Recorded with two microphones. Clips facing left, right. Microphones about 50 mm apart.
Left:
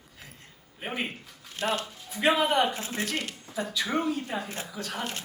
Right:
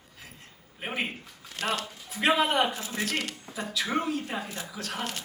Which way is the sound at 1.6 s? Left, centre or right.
Right.